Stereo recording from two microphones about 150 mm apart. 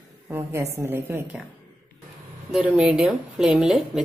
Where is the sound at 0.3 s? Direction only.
15° right (ahead or behind).